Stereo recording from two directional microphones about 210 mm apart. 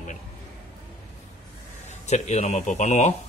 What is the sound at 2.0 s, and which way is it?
A man's voice, 30° left (ahead or behind).